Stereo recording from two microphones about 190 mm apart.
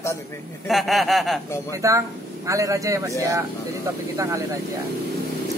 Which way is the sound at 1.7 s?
15° right (ahead or behind).